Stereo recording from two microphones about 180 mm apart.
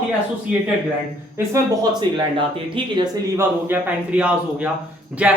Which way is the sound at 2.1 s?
25° right (ahead or behind).